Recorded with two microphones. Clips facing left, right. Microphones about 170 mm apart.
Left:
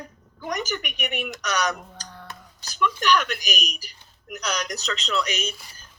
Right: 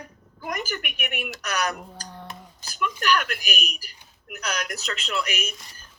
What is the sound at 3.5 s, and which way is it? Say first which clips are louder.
Speech: left 1 dB; 5° right (ahead or behind).